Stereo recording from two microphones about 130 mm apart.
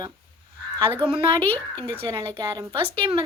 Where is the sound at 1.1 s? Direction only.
40° right (ahead or behind).